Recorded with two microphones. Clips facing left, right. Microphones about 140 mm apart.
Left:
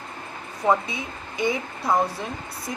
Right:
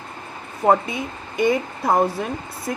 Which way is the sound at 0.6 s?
50° right (ahead or behind).